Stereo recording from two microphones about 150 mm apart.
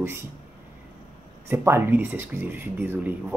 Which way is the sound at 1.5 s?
15° right (ahead or behind).